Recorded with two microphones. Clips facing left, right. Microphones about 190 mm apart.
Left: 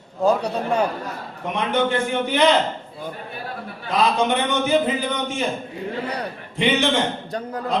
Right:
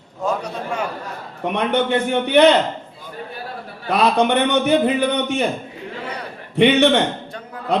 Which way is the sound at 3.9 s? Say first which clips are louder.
Right 3 dB; 65° right (ahead or behind).